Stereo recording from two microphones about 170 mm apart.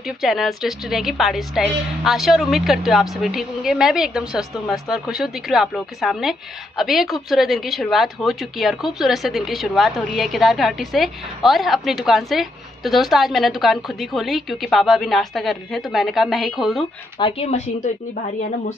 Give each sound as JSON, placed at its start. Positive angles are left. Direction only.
{"t": 0.0, "sound": "a woman's voice", "side_deg": 0}
{"t": 17.2, "sound": "speech", "side_deg": 35}